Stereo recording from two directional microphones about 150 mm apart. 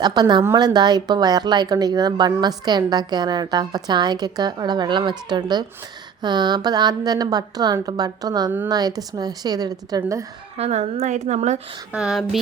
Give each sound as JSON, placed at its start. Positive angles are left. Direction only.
{"t": 0.0, "sound": "speech", "side_deg": -30}
{"t": 10.6, "sound": "a woman's voice", "side_deg": -45}
{"t": 11.9, "sound": "speech", "side_deg": -5}